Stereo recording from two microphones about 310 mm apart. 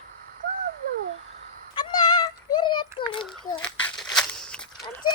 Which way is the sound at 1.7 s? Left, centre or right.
Centre.